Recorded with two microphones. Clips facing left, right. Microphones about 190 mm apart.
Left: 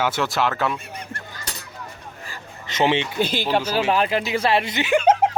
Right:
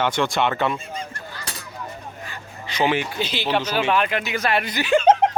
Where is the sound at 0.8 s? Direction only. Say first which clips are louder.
Right 4 dB; 65° left (ahead or behind).